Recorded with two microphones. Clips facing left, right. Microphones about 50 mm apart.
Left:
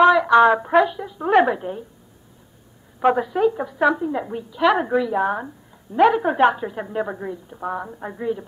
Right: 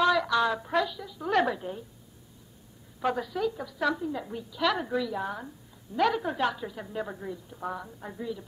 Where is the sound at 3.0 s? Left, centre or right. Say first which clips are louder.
Left 11 dB; left.